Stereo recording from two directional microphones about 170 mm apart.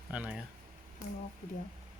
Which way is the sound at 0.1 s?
5° right (ahead or behind).